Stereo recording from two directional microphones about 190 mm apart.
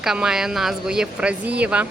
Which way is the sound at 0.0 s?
5° right (ahead or behind).